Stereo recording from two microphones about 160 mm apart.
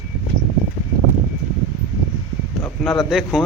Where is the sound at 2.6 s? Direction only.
Centre (ahead or behind).